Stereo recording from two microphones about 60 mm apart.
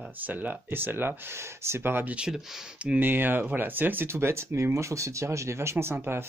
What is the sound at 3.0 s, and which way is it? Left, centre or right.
Speech, right.